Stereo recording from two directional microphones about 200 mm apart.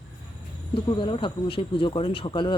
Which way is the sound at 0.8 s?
25° left (ahead or behind).